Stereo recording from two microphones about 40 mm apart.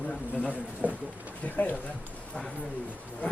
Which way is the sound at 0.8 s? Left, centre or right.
Right.